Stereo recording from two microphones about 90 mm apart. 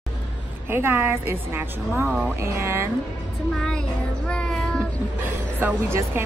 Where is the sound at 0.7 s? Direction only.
25° right (ahead or behind).